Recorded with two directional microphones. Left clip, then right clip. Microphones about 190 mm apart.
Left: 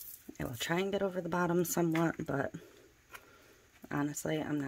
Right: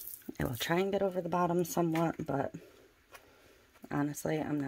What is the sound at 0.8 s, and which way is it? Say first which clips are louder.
Speech: right 2 dB; 5° right (ahead or behind).